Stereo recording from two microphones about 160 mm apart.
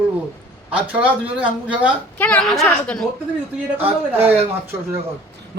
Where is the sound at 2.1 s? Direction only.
10° left (ahead or behind).